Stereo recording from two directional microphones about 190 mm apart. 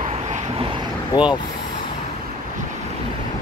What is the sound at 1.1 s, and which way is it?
Speech, 20° left (ahead or behind).